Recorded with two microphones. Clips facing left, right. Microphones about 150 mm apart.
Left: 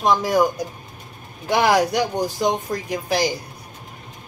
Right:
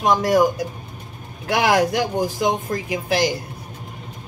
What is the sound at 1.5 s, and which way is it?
Speech, 5° right (ahead or behind).